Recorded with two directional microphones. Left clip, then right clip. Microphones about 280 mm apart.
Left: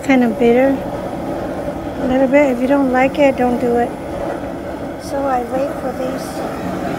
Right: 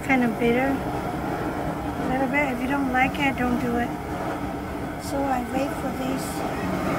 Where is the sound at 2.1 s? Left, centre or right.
Left.